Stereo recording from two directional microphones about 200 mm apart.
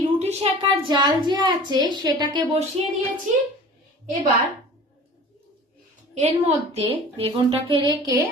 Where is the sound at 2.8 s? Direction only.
30° right (ahead or behind).